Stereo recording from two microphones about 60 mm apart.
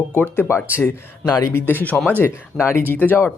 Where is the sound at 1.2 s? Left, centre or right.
Left.